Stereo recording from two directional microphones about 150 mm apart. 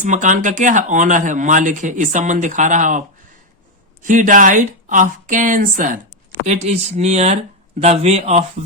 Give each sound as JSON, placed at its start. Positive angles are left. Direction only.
{"t": 0.0, "sound": "speech", "side_deg": -60}
{"t": 4.0, "sound": "speech", "side_deg": -60}
{"t": 6.4, "sound": "speech", "side_deg": -45}